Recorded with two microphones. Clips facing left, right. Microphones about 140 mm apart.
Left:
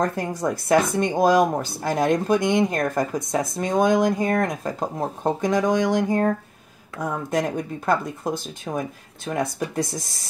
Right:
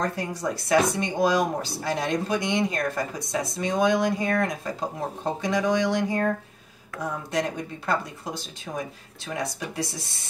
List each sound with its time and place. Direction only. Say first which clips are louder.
0.0 s speech: left 4 dB; 50° left (ahead or behind)